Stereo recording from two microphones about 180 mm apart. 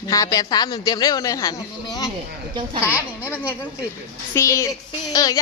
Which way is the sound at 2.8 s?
10° right (ahead or behind).